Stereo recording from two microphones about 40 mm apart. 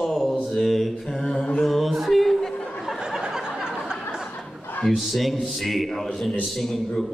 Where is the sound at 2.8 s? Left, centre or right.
Centre.